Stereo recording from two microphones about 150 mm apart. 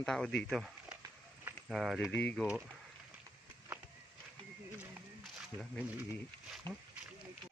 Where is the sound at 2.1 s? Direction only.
10° left (ahead or behind).